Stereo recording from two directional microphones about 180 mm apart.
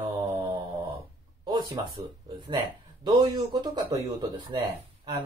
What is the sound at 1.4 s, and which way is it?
Speech, 25° right (ahead or behind).